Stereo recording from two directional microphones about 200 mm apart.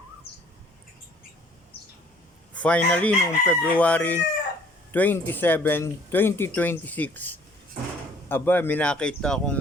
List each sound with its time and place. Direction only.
0.3 s bird: 55° left (ahead or behind)
2.6 s speech: 5° left (ahead or behind)